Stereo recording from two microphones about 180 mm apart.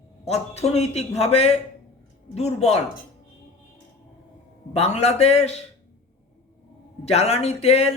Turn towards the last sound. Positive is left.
turn(degrees=35)  # may be behind; listen again after turning